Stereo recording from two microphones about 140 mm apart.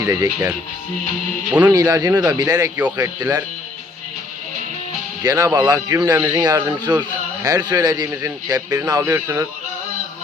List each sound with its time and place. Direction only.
0.0 s speech: 25° right (ahead or behind)
1.5 s a man's voice: 10° right (ahead or behind)
1.7 s speech: 25° right (ahead or behind)
5.2 s speech: 25° right (ahead or behind)